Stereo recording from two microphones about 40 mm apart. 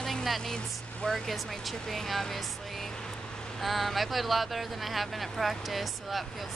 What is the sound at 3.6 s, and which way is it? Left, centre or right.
Speech, centre.